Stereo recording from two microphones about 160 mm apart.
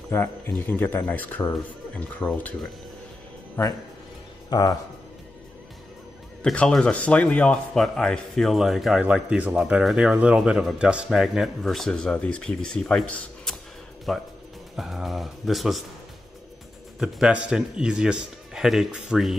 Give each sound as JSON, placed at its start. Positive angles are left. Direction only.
{"t": 0.1, "sound": "speech", "side_deg": 15}
{"t": 6.4, "sound": "a man's voice", "side_deg": 5}
{"t": 17.0, "sound": "a man's voice", "side_deg": -5}